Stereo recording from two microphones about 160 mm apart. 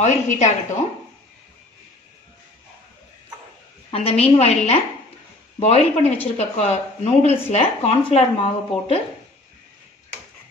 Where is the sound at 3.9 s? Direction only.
40° left (ahead or behind).